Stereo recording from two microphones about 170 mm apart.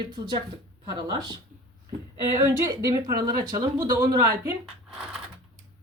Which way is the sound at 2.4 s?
20° right (ahead or behind).